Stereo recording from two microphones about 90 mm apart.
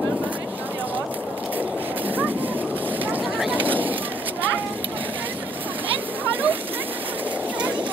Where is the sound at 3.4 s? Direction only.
20° right (ahead or behind).